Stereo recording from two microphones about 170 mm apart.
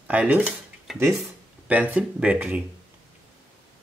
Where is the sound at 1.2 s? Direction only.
10° right (ahead or behind).